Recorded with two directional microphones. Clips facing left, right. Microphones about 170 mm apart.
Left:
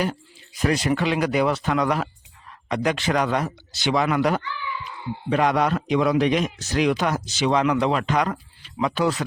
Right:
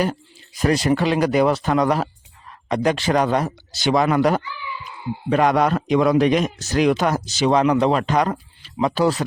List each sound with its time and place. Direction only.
0.0 s a man's voice: 40° right (ahead or behind)